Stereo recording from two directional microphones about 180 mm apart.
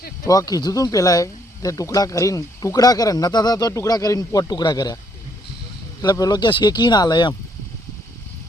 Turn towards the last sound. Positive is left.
turn(degrees=25)  # may be behind; listen again after turning